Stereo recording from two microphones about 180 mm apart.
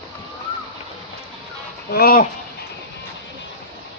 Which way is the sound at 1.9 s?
55° left (ahead or behind).